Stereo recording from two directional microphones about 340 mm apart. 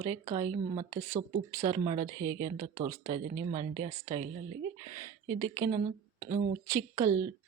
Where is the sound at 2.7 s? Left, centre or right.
Centre.